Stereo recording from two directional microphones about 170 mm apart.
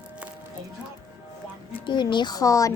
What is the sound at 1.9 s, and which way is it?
Speech, 25° left (ahead or behind).